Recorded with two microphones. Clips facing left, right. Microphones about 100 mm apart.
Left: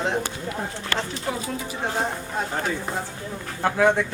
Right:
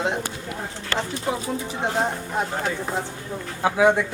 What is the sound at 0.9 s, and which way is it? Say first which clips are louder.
Speech: right 3 dB; 30° right (ahead or behind).